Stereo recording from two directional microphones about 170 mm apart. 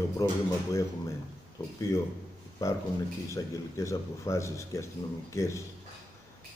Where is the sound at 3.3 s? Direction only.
15° left (ahead or behind).